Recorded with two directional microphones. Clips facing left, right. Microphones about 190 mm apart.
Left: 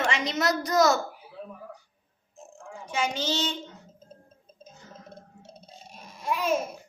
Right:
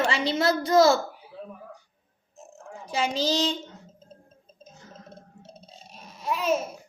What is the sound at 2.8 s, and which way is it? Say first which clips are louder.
Speech: right 3 dB; 35° right (ahead or behind).